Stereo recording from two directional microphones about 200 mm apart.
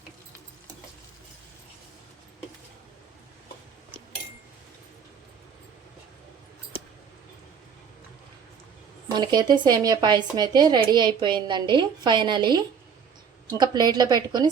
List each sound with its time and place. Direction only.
9.1 s speech: 20° right (ahead or behind)